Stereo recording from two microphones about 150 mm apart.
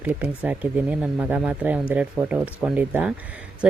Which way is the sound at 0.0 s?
10° right (ahead or behind).